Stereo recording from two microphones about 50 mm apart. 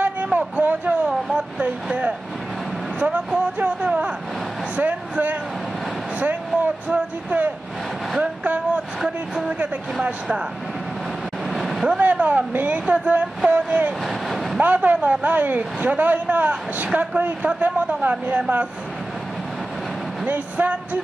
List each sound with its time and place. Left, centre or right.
0.0 s a sound: right
1.0 s speech: centre
3.5 s speech: right
8.2 s a sound: right
9.0 s speech: centre
11.5 s vehicle: centre
12.0 s speech: right
14.0 s vehicle: centre
14.6 s speech: right
20.2 s speech: right